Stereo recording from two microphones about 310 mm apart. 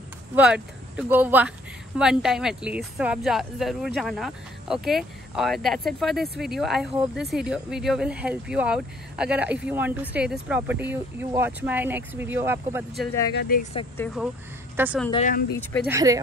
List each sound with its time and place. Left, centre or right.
0.4 s speech: centre
13.3 s speech: left
13.7 s speech: centre
15.0 s speech: left
15.9 s speech: centre